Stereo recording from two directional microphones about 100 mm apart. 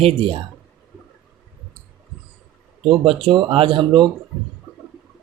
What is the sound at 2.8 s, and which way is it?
Speech, 65° right (ahead or behind).